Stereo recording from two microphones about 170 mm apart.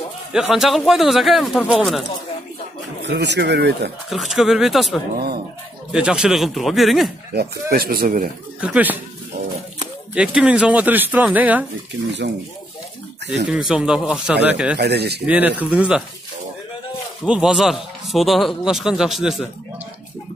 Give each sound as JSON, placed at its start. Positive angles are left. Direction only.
{"t": 0.3, "sound": "a man's voice", "side_deg": -5}
{"t": 3.0, "sound": "speech", "side_deg": -90}
{"t": 4.1, "sound": "a man's voice", "side_deg": 0}
{"t": 7.3, "sound": "speech", "side_deg": -60}
{"t": 8.5, "sound": "a man's voice", "side_deg": -5}
{"t": 10.1, "sound": "a man's voice", "side_deg": -5}
{"t": 13.5, "sound": "a man's voice", "side_deg": -5}
{"t": 14.8, "sound": "speech", "side_deg": -75}
{"t": 15.2, "sound": "a man's voice", "side_deg": -10}
{"t": 17.2, "sound": "a man's voice", "side_deg": -5}